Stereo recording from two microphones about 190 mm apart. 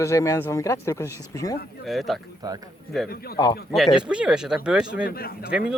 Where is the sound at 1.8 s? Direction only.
Centre (ahead or behind).